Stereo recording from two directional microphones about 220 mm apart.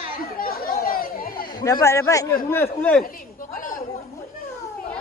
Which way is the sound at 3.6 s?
35° left (ahead or behind).